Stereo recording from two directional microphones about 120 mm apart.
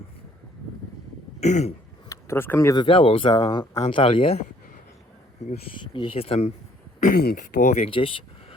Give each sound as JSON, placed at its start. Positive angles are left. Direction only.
{"t": 1.4, "sound": "throat clearing", "side_deg": 70}
{"t": 2.0, "sound": "speech", "side_deg": 20}
{"t": 2.7, "sound": "speech", "side_deg": 45}
{"t": 5.8, "sound": "speech", "side_deg": 45}
{"t": 7.0, "sound": "speech", "side_deg": 90}
{"t": 7.9, "sound": "speech", "side_deg": 50}